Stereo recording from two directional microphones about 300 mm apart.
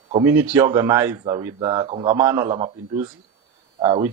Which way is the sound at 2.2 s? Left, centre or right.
Centre.